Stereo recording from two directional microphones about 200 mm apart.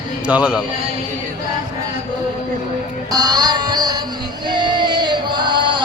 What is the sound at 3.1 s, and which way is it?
Mantra, 20° right (ahead or behind).